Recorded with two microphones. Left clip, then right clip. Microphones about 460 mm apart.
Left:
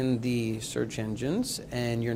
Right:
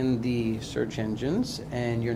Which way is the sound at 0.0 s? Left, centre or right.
Left.